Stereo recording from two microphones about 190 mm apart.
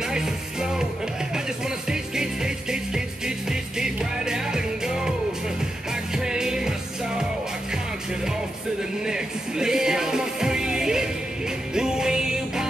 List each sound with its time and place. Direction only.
0.0 s music: 5° right (ahead or behind)
1.9 s music: 5° right (ahead or behind)
6.1 s music: 5° right (ahead or behind)
9.0 s music: 5° right (ahead or behind)